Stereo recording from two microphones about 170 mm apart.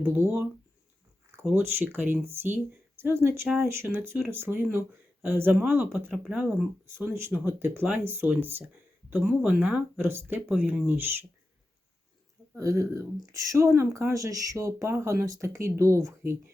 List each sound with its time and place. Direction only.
1.5 s speech: 15° right (ahead or behind)
12.5 s speech: 15° right (ahead or behind)